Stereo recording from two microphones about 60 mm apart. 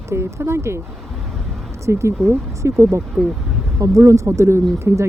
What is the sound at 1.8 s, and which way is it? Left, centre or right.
Speech, right.